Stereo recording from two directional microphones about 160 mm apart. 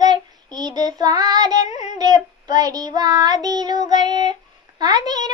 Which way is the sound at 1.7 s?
45° left (ahead or behind).